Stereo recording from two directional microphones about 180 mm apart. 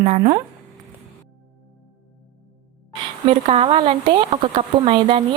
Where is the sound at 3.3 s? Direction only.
35° right (ahead or behind).